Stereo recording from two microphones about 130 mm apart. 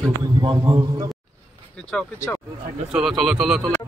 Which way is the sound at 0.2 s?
30° right (ahead or behind).